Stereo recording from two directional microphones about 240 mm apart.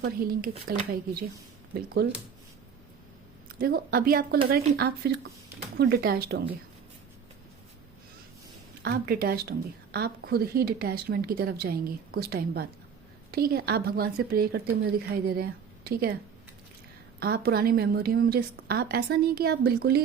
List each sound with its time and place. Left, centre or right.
0.0 s a woman's voice: right
3.6 s a woman's voice: right
8.8 s a woman's voice: right
17.2 s a woman's voice: right